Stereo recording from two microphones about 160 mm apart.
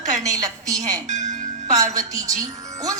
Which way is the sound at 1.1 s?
50° right (ahead or behind).